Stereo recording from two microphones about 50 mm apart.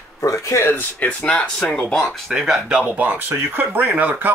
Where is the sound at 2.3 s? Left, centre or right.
Centre.